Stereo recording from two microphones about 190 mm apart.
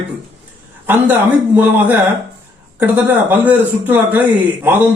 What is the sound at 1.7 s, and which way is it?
Speech, 10° right (ahead or behind).